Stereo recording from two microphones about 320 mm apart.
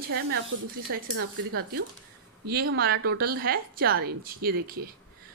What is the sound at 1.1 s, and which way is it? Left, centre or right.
Speech, right.